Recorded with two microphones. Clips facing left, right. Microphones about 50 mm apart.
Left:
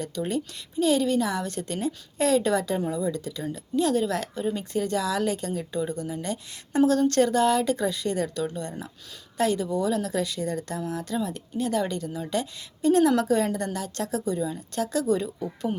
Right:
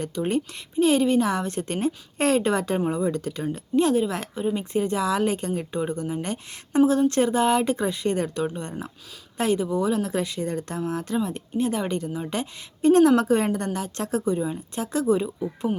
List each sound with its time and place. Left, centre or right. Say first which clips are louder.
0.0 s speech: right 3 dB; right
6.8 s speech: even; centre